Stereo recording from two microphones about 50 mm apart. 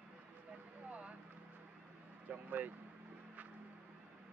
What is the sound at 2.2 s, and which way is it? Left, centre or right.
Speech, right.